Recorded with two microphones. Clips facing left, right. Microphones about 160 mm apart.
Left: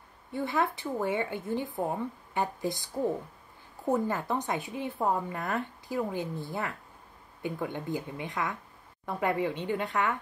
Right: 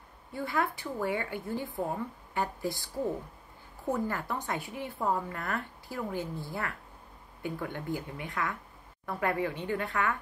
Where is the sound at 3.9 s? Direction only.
20° left (ahead or behind).